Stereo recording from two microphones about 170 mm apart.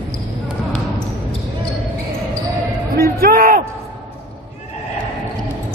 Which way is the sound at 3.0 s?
60° right (ahead or behind).